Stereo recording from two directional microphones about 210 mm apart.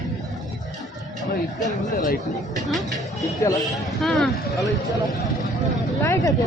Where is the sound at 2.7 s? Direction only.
Centre (ahead or behind).